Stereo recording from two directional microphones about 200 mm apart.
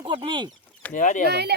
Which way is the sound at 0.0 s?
25° right (ahead or behind).